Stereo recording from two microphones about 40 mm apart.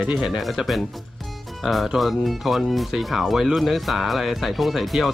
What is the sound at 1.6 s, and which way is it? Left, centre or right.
Speech, centre.